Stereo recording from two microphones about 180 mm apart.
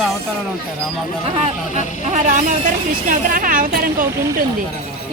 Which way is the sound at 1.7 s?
40° right (ahead or behind).